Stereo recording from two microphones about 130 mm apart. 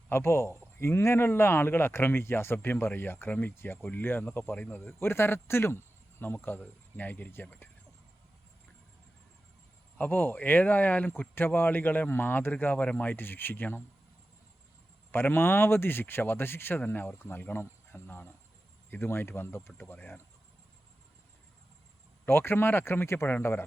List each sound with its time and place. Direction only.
0.1 s a man's voice: 20° left (ahead or behind)
10.0 s a man's voice: 15° left (ahead or behind)
15.1 s a man's voice: 15° left (ahead or behind)
22.3 s a man's voice: 20° left (ahead or behind)